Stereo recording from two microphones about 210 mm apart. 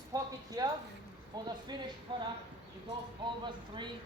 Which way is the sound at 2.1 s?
25° right (ahead or behind).